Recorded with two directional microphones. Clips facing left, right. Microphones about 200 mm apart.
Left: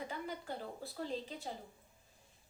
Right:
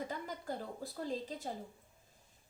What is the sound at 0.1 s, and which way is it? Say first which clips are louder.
Speech: right 1 dB; 40° right (ahead or behind).